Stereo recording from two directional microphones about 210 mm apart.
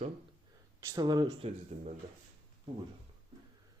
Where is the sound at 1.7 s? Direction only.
35° right (ahead or behind).